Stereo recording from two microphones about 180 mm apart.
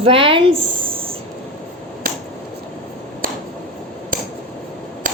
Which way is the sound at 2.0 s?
50° right (ahead or behind).